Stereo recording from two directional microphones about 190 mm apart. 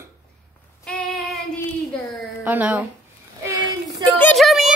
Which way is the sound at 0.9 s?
Centre (ahead or behind).